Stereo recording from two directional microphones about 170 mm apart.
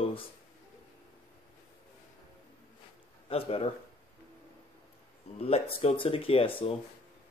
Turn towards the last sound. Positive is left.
turn(degrees=35)  # may be behind; listen again after turning